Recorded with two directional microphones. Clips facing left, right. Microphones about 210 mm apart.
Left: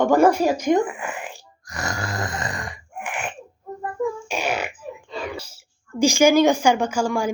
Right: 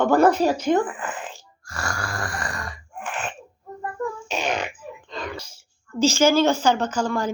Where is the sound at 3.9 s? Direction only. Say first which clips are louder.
Left 3 dB; 10° left (ahead or behind).